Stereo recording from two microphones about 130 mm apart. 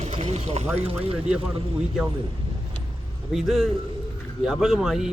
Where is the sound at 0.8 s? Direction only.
50° right (ahead or behind).